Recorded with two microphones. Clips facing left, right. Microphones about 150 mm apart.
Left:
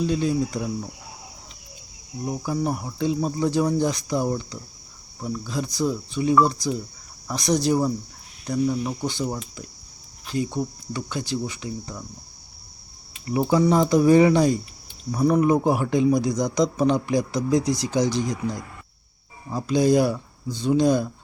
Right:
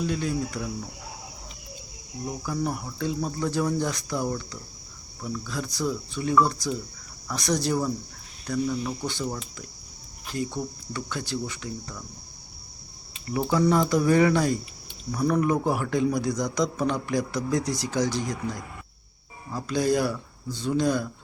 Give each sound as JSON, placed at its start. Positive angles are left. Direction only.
{"t": 0.1, "sound": "cricket", "side_deg": 25}
{"t": 2.2, "sound": "cricket", "side_deg": 25}
{"t": 10.3, "sound": "cricket", "side_deg": 20}
{"t": 13.3, "sound": "cricket", "side_deg": 20}
{"t": 19.5, "sound": "cricket", "side_deg": 20}